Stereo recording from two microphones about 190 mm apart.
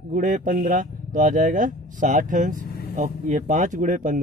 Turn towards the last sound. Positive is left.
turn(degrees=-45)  # may be behind; listen again after turning